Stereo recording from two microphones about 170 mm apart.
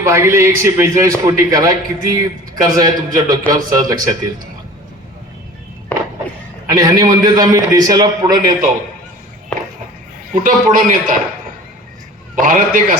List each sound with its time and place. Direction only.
0.0 s a man's voice: 15° right (ahead or behind)
5.9 s a sound: 10° left (ahead or behind)
6.7 s a man's voice: 20° right (ahead or behind)
10.3 s a man's voice: 55° right (ahead or behind)
12.4 s a man's voice: 55° right (ahead or behind)